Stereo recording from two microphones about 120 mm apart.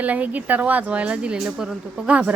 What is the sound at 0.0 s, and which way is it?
A woman's voice, 15° right (ahead or behind).